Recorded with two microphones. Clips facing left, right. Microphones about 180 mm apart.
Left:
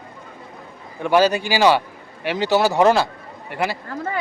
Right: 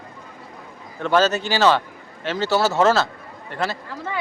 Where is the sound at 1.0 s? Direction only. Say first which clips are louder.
Left 2 dB; 10° left (ahead or behind).